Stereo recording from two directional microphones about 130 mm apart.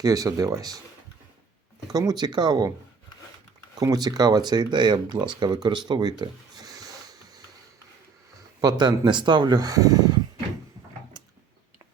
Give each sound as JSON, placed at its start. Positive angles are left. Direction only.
{"t": 0.0, "sound": "speech", "side_deg": -30}
{"t": 1.9, "sound": "speech", "side_deg": -30}
{"t": 3.8, "sound": "speech", "side_deg": -30}
{"t": 5.6, "sound": "a sound", "side_deg": -35}
{"t": 8.6, "sound": "speech", "side_deg": -35}